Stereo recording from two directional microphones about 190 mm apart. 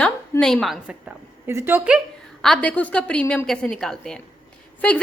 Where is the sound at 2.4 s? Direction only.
5° left (ahead or behind).